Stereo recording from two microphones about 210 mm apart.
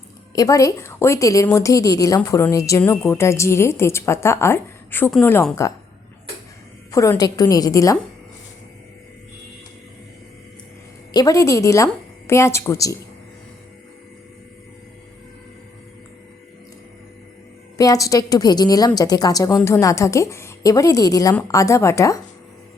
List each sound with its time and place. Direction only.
0.3 s a woman's voice: 15° left (ahead or behind)
6.9 s a woman's voice: 15° left (ahead or behind)
11.1 s a woman's voice: 15° left (ahead or behind)
17.7 s a woman's voice: 15° left (ahead or behind)